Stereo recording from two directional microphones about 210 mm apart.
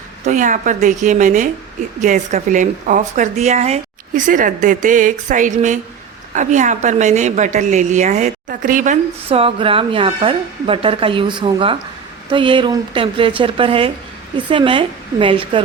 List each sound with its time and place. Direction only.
0.3 s a woman's voice: 35° right (ahead or behind)